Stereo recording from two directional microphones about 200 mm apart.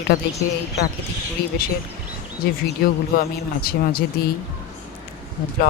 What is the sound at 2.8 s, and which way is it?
A man's voice, 50° left (ahead or behind).